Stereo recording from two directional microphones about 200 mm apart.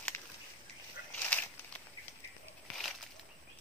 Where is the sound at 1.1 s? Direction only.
10° left (ahead or behind).